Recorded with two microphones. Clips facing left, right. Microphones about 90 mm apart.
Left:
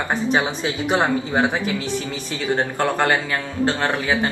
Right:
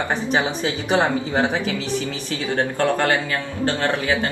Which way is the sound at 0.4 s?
20° left (ahead or behind).